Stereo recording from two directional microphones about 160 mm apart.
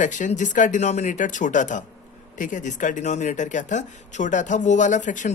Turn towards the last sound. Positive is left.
turn(degrees=50)  # may be behind; listen again after turning